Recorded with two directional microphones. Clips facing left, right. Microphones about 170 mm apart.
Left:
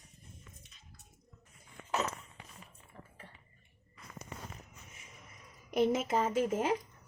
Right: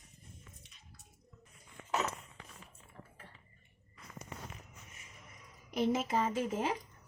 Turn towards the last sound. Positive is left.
turn(degrees=50)  # may be behind; listen again after turning